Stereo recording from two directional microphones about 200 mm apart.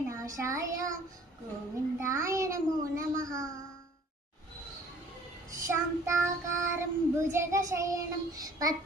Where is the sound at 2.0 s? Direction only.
15° right (ahead or behind).